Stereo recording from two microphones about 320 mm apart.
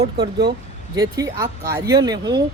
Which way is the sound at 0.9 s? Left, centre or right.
Centre.